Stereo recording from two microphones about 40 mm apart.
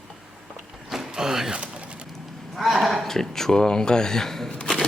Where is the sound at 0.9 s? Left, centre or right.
Centre.